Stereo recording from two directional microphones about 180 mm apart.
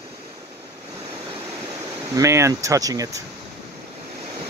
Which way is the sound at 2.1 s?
15° right (ahead or behind).